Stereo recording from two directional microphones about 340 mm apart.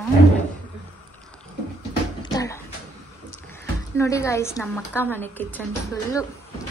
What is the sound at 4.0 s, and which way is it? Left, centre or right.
Speech, centre.